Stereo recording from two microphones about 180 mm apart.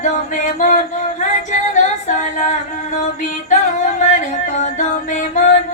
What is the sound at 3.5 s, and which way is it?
Music, 40° left (ahead or behind).